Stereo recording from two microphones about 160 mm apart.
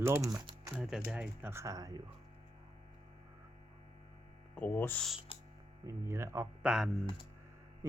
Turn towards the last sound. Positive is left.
turn(degrees=-5)  # may be behind; listen again after turning